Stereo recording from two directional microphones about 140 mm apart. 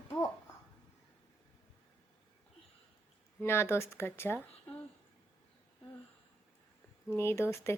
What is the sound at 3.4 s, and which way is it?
Speech, 15° left (ahead or behind).